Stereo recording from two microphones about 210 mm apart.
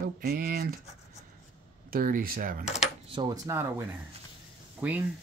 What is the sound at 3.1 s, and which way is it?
Speech, 15° right (ahead or behind).